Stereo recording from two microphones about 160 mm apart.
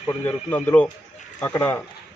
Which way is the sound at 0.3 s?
10° left (ahead or behind).